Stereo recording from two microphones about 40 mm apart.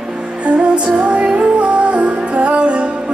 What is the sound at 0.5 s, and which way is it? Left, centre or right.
Music, right.